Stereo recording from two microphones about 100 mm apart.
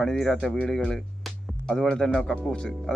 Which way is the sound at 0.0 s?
5° left (ahead or behind).